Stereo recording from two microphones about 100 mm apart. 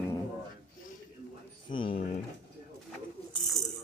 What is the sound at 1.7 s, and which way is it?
Speech, 65° left (ahead or behind).